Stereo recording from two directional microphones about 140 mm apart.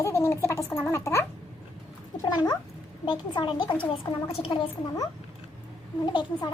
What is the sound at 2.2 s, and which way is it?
A woman's voice, 30° left (ahead or behind).